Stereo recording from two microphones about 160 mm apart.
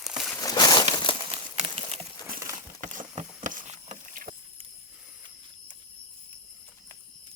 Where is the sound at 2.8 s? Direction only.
55° right (ahead or behind).